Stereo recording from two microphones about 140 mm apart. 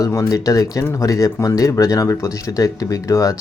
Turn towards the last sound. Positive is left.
turn(degrees=25)  # may be behind; listen again after turning